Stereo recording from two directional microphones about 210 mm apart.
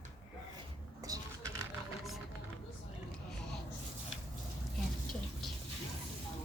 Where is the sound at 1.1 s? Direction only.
15° right (ahead or behind).